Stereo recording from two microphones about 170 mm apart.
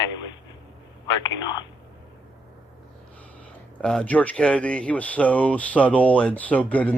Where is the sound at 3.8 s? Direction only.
5° left (ahead or behind).